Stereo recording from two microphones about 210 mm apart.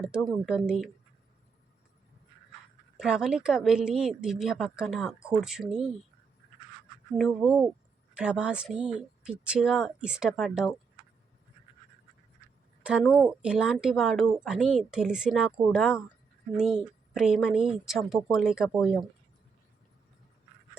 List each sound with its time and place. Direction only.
0.0 s speech: 5° right (ahead or behind)
3.0 s speech: 5° right (ahead or behind)
7.2 s speech: centre (ahead or behind)
12.8 s speech: 5° right (ahead or behind)